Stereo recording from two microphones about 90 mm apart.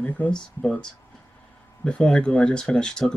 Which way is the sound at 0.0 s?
15° left (ahead or behind).